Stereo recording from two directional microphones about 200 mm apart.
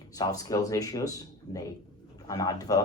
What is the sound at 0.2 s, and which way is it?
Speech, 20° left (ahead or behind).